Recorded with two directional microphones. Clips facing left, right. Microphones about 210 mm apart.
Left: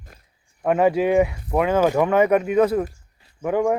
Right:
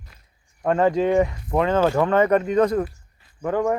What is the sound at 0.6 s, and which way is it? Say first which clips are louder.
Speech: left 1 dB; 10° left (ahead or behind).